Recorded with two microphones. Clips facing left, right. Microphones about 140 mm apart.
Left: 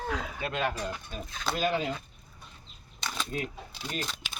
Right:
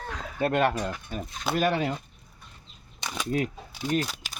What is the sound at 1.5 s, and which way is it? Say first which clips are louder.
Speech: right 4 dB; 65° right (ahead or behind).